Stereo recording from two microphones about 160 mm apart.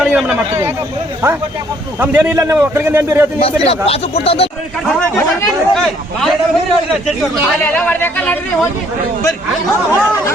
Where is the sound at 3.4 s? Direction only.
35° left (ahead or behind).